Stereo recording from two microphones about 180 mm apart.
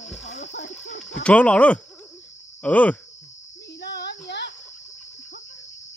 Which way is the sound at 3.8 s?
65° left (ahead or behind).